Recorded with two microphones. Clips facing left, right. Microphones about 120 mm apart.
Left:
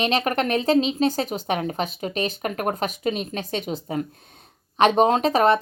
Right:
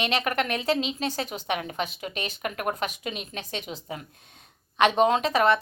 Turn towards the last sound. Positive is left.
turn(degrees=40)  # may be behind; listen again after turning